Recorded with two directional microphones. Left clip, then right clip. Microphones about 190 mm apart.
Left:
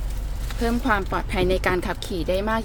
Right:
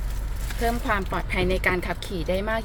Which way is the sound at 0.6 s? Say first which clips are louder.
Left 2 dB; 15° left (ahead or behind).